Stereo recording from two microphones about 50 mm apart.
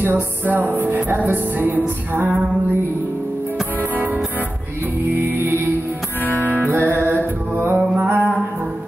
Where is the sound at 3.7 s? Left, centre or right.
Right.